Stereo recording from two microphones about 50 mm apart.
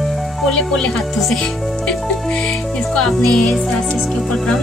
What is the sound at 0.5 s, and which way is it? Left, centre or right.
Speech, centre.